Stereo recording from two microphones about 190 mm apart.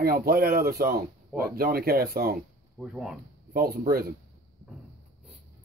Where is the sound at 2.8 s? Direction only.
5° right (ahead or behind).